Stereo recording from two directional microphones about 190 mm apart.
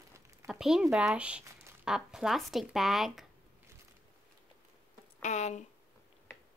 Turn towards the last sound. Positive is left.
turn(degrees=40)  # may be behind; listen again after turning